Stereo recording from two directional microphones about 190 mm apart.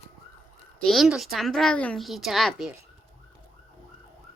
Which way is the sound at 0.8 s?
Centre (ahead or behind).